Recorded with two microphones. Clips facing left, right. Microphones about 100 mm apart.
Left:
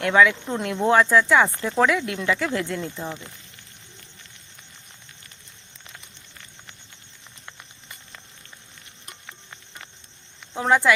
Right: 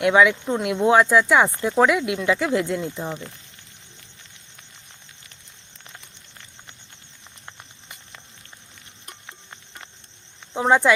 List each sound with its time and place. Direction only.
0.0 s speech: 15° right (ahead or behind)
10.5 s speech: 20° right (ahead or behind)